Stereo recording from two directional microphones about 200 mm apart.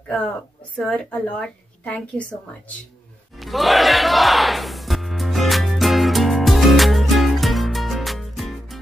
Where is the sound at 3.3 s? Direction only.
Centre (ahead or behind).